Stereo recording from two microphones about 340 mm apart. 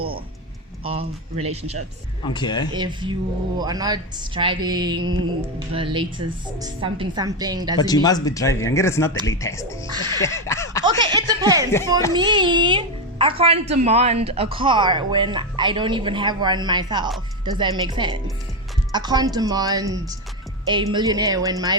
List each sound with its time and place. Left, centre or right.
0.9 s a child's voice: centre
2.2 s speech: centre
2.7 s a child's voice: centre
7.8 s speech: centre
9.8 s a child's voice: centre
10.2 s speech: centre
11.0 s a child's voice: centre